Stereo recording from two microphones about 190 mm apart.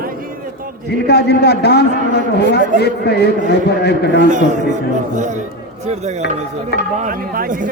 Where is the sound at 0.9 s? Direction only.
60° left (ahead or behind).